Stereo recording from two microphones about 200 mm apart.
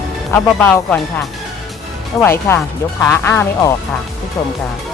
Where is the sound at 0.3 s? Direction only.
10° left (ahead or behind).